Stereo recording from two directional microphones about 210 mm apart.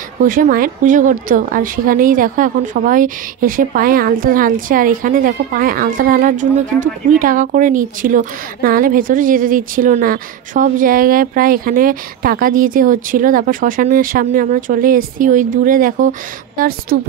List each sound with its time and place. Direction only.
0.2 s a woman's voice: 40° right (ahead or behind)